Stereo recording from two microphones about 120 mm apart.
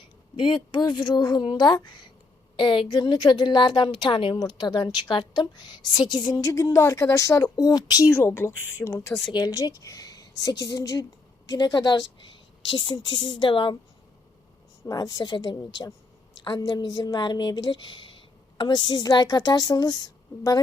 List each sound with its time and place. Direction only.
0.3 s a woman's voice: 40° left (ahead or behind)
4.4 s a woman's voice: 35° left (ahead or behind)
8.1 s speech: 20° left (ahead or behind)
9.3 s a woman's voice: 30° left (ahead or behind)
14.8 s a woman's voice: 30° left (ahead or behind)